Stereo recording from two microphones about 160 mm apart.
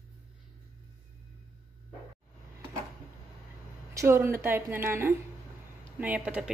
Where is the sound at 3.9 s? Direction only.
15° right (ahead or behind).